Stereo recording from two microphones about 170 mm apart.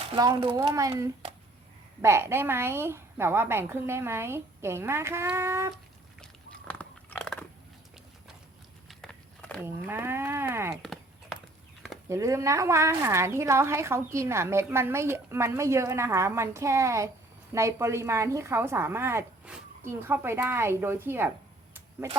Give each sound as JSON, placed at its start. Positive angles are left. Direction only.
{"t": 0.4, "sound": "a woman's voice", "side_deg": -20}
{"t": 5.7, "sound": "biting", "side_deg": 5}
{"t": 8.9, "sound": "walk", "side_deg": 5}
{"t": 9.6, "sound": "speech", "side_deg": -15}
{"t": 12.0, "sound": "a woman's voice", "side_deg": -20}